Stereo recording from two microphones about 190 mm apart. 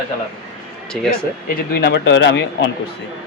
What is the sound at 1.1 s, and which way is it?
Speech, 55° left (ahead or behind).